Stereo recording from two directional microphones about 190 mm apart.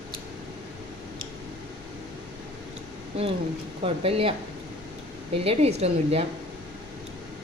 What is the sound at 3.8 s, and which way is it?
Speech, 30° right (ahead or behind).